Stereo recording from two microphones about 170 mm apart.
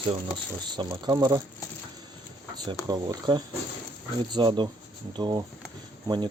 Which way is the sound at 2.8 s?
25° right (ahead or behind).